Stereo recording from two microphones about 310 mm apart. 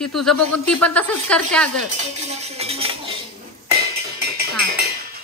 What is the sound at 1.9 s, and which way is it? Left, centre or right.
Cutlery, right.